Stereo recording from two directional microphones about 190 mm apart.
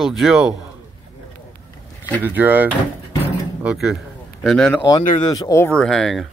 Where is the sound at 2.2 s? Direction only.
10° right (ahead or behind).